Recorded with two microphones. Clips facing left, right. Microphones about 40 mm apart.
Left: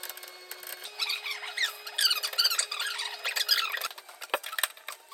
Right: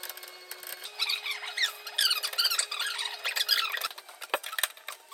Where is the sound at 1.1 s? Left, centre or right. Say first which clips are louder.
Right 1 dB; right.